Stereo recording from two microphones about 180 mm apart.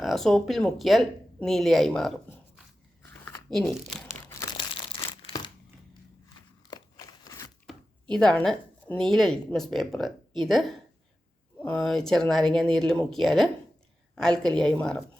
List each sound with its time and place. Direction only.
0.0 s a woman's voice: centre (ahead or behind)
3.5 s a woman's voice: 5° left (ahead or behind)
4.1 s crumpling: 15° left (ahead or behind)
6.6 s a sound: 25° left (ahead or behind)
8.1 s a woman's voice: 5° left (ahead or behind)